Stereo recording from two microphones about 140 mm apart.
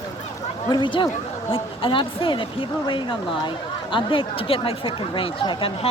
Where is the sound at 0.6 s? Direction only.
30° left (ahead or behind).